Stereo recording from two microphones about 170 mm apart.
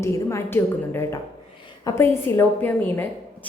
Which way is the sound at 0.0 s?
15° left (ahead or behind).